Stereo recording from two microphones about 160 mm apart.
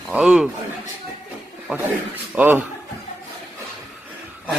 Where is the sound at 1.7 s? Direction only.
15° right (ahead or behind).